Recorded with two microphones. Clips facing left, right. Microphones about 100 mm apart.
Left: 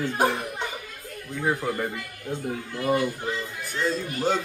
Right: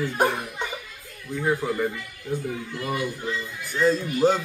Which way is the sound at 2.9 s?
35° left (ahead or behind).